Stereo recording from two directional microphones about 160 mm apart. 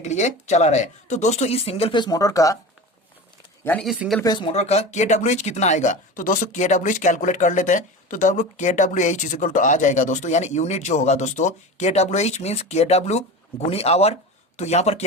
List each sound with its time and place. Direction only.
0.0 s speech: 45° left (ahead or behind); by 2.6 s 20° left (ahead or behind)
3.6 s speech: 10° left (ahead or behind)
4.2 s speech: 25° left (ahead or behind)
4.5 s speech: 45° left (ahead or behind)